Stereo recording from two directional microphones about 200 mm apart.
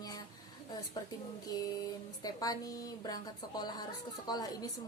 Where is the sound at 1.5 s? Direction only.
20° left (ahead or behind).